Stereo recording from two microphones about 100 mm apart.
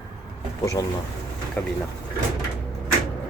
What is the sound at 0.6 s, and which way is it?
Speech, 35° left (ahead or behind).